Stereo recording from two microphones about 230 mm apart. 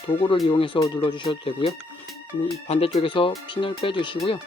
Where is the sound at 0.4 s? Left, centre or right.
Left.